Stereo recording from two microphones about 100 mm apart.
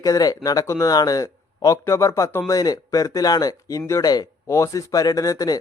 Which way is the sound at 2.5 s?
40° left (ahead or behind).